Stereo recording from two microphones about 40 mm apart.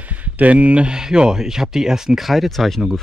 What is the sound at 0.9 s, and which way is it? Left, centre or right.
Speech, centre.